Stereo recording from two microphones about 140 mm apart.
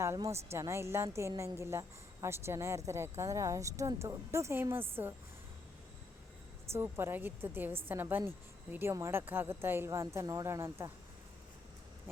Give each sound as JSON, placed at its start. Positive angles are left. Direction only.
{"t": 0.0, "sound": "speech", "side_deg": -20}
{"t": 6.7, "sound": "a woman's voice", "side_deg": -15}